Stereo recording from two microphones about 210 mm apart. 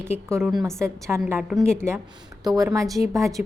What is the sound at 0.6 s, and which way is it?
A woman's voice, 10° right (ahead or behind).